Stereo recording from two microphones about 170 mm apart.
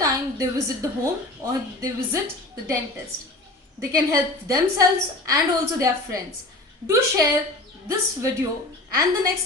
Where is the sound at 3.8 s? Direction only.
20° right (ahead or behind).